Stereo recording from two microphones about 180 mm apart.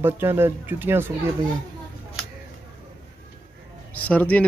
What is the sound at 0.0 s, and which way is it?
Speech, 10° right (ahead or behind).